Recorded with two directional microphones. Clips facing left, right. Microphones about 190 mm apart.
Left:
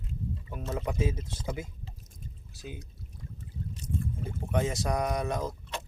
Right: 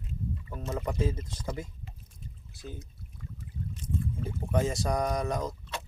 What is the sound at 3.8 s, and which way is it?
Boat, 75° left (ahead or behind).